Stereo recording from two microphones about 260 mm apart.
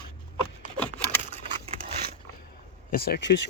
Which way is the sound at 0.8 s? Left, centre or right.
Centre.